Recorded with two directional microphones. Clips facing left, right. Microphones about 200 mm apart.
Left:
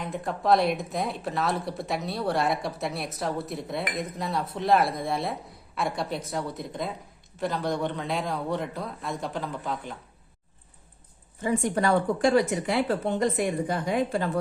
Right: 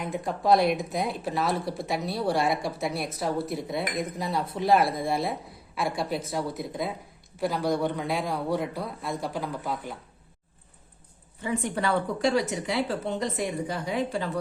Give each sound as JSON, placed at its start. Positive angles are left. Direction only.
{"t": 0.0, "sound": "a man's voice", "side_deg": 0}
{"t": 11.4, "sound": "a woman's voice", "side_deg": 45}